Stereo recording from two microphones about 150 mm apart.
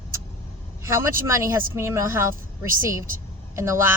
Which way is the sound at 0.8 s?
20° right (ahead or behind).